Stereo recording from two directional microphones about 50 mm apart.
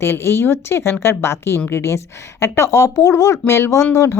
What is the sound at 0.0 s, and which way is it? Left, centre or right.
Speech, left.